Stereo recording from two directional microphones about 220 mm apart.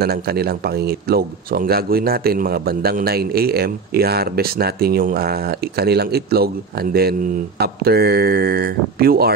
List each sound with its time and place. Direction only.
0.0 s a man's voice: 45° right (ahead or behind)